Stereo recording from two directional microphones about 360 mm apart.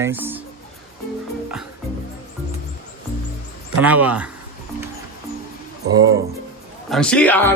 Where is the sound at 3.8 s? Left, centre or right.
Centre.